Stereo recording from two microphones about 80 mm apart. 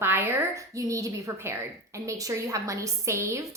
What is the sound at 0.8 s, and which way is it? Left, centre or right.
A woman's voice, right.